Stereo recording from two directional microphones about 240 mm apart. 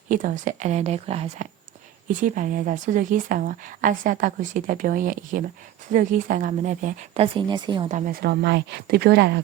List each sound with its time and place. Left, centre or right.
0.1 s speech: right
7.9 s speech: right